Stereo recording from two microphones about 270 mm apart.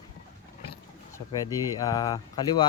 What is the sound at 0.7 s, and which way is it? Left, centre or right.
Speech, centre.